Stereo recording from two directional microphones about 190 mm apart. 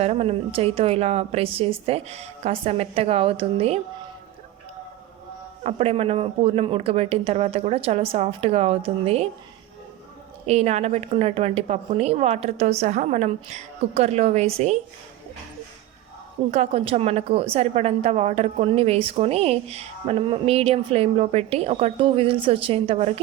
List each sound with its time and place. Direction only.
0.0 s a woman's voice: 35° right (ahead or behind)
5.6 s a woman's voice: 30° right (ahead or behind)
10.4 s a woman's voice: 35° right (ahead or behind)
16.5 s a woman's voice: 35° right (ahead or behind)